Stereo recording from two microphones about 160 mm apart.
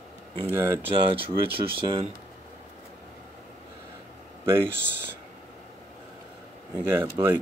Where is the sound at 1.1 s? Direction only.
35° right (ahead or behind).